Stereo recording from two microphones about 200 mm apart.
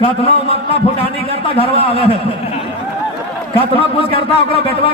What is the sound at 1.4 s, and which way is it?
Speech, 25° left (ahead or behind).